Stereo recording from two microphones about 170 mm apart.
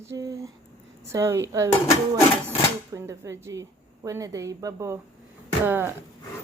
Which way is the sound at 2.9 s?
15° right (ahead or behind).